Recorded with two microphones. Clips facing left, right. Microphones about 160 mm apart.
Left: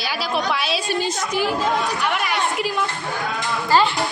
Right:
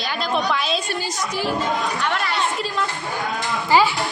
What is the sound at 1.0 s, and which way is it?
A woman's voice, 20° left (ahead or behind).